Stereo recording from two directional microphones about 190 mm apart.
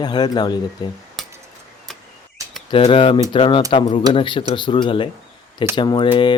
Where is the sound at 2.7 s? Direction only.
25° left (ahead or behind).